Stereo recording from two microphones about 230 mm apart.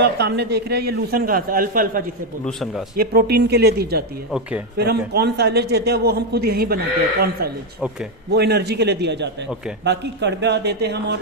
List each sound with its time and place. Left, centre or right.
0.0 s a man's voice: right
4.3 s speech: centre
4.8 s a man's voice: right
8.3 s a man's voice: right